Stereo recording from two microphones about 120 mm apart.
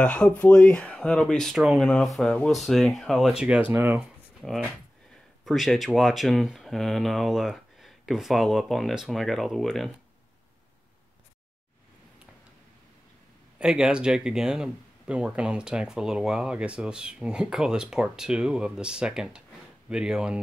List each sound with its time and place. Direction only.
0.0 s speech: 10° left (ahead or behind); by 4.0 s 15° right (ahead or behind)
4.4 s speech: centre (ahead or behind)
13.6 s speech: 5° right (ahead or behind)